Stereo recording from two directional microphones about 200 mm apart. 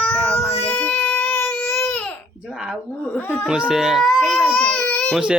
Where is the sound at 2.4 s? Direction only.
5° right (ahead or behind).